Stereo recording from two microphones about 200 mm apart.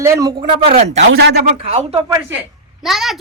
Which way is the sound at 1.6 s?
30° right (ahead or behind).